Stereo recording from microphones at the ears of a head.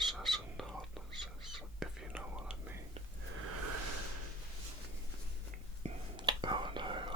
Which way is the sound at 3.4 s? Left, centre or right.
Right.